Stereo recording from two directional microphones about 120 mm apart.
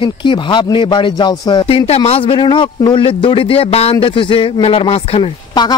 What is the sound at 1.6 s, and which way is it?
A man's voice, 55° left (ahead or behind).